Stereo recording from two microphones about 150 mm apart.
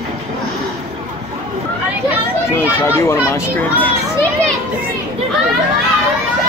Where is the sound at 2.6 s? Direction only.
15° left (ahead or behind).